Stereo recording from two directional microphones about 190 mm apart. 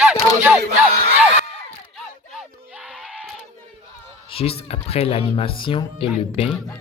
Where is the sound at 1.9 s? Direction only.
Centre (ahead or behind).